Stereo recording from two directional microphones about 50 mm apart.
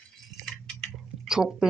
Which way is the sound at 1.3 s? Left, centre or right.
Centre.